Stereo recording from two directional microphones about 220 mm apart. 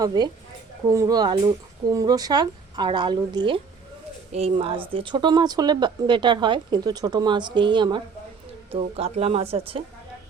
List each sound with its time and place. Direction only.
0.0 s speech: 20° right (ahead or behind)